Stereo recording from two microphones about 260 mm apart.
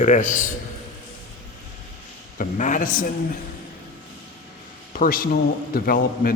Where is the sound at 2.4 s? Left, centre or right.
Left.